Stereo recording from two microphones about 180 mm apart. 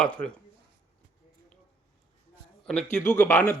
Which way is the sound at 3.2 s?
10° left (ahead or behind).